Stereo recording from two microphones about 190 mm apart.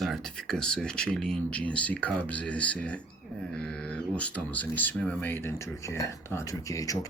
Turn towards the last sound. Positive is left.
turn(degrees=15)  # may be behind; listen again after turning